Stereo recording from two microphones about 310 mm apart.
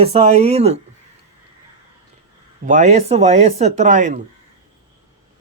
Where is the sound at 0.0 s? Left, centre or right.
Centre.